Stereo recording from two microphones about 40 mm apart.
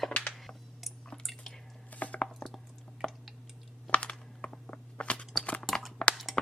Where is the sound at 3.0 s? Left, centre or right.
Left.